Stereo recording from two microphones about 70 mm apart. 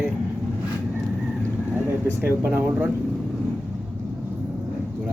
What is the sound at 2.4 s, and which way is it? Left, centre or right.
Speech, right.